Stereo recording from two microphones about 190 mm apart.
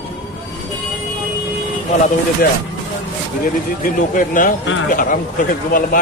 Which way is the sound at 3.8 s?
45° left (ahead or behind).